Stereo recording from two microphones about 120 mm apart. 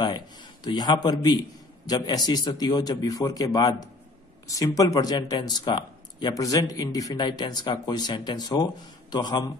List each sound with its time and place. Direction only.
0.7 s speech: 35° left (ahead or behind)